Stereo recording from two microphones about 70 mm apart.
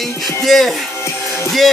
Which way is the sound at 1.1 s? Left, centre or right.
Left.